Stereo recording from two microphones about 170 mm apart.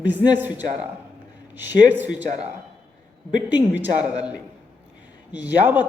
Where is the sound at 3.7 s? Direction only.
10° right (ahead or behind).